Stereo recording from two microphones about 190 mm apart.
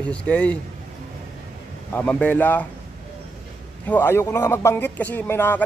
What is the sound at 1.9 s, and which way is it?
Speech, 5° left (ahead or behind).